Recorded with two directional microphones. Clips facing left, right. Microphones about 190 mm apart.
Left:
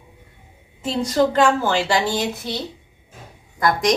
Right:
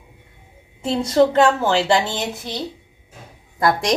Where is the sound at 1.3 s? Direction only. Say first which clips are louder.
Right 1 dB; 25° right (ahead or behind).